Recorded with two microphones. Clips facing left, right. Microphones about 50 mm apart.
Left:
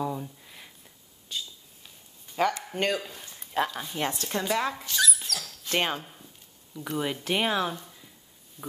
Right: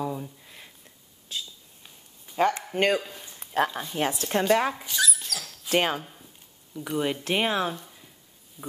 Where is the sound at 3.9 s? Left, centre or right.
Centre.